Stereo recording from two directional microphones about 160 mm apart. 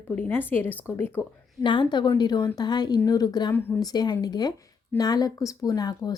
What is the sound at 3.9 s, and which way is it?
Speech, 25° left (ahead or behind).